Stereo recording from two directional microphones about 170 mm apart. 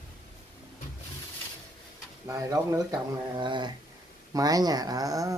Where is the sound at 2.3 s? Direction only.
20° right (ahead or behind).